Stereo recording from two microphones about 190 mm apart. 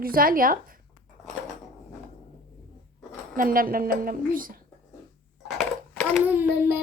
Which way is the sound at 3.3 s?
50° right (ahead or behind).